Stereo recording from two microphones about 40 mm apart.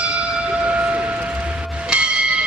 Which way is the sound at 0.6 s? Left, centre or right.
Right.